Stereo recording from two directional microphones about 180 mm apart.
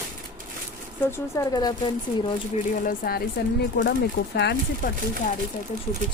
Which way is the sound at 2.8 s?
55° left (ahead or behind).